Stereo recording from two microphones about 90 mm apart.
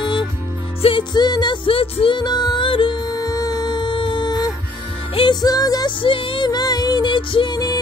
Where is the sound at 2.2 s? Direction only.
50° left (ahead or behind).